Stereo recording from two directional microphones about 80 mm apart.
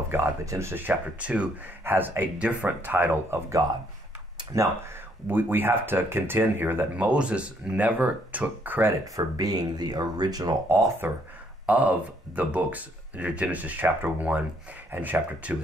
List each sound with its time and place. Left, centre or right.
0.1 s speech: right
5.3 s speech: right
7.1 s speech: centre
9.0 s speech: right
10.7 s speech: right
11.6 s speech: centre